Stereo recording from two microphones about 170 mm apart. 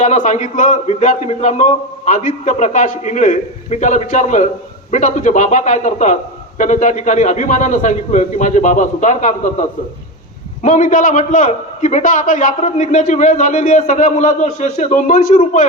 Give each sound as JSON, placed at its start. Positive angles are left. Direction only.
{"t": 0.0, "sound": "a man's voice", "side_deg": 45}